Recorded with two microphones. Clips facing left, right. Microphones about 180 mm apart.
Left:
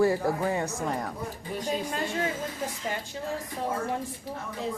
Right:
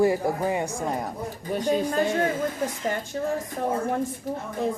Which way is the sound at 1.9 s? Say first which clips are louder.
Right 7 dB; 50° right (ahead or behind).